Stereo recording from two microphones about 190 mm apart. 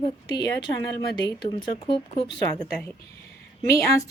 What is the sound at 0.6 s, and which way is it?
Speech, 20° left (ahead or behind).